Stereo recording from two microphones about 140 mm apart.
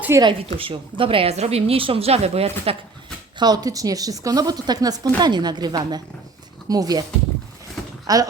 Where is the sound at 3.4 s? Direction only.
30° right (ahead or behind).